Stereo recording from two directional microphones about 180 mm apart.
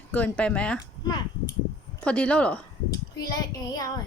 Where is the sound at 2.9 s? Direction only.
20° left (ahead or behind).